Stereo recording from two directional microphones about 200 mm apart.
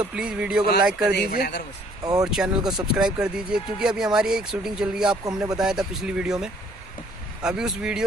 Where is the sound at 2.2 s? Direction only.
5° right (ahead or behind).